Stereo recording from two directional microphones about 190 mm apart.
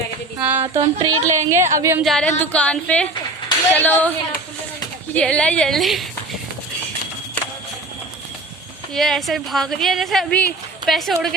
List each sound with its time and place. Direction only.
0.3 s speech: 10° right (ahead or behind)
0.7 s a sound: 20° right (ahead or behind)
1.5 s a woman's voice: 15° right (ahead or behind)
2.0 s a woman's voice: 5° left (ahead or behind)
8.9 s a woman's voice: centre (ahead or behind)